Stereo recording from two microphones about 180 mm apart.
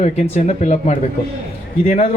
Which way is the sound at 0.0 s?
40° left (ahead or behind).